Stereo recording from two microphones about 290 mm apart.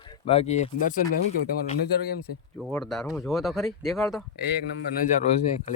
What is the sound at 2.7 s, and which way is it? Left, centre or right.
Speech, centre.